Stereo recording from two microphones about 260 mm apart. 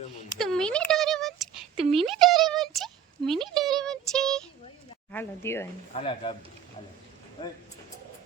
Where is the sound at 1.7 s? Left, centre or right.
Right.